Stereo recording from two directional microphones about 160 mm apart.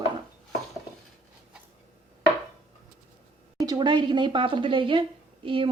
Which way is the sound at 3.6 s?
25° right (ahead or behind).